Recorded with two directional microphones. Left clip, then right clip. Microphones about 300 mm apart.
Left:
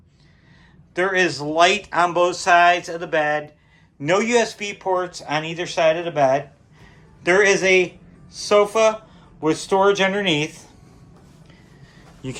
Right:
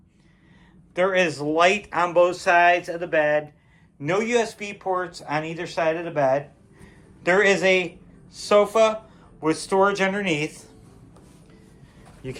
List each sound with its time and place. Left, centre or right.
0.9 s a man's voice: centre
12.2 s speech: centre